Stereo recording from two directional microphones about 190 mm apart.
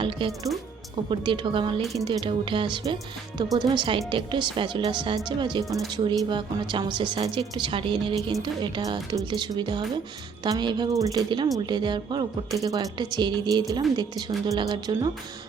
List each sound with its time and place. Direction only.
1.1 s a woman's voice: 25° right (ahead or behind)